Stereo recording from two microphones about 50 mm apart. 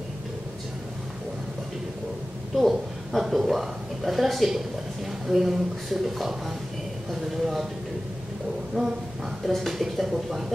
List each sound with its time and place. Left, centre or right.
2.5 s a woman's voice: centre
7.1 s a sound: centre
8.8 s speech: centre